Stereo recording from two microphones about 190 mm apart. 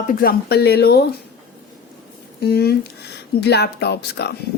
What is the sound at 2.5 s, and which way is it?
Speech, 55° left (ahead or behind).